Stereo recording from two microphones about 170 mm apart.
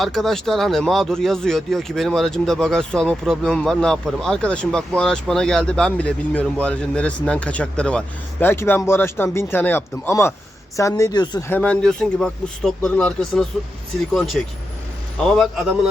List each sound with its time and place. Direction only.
0.0 s a woman's voice: centre (ahead or behind); by 11.4 s 25° left (ahead or behind)
11.4 s speech: 10° left (ahead or behind)